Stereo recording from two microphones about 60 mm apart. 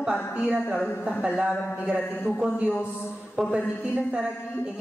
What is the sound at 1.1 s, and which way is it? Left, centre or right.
Speech, centre.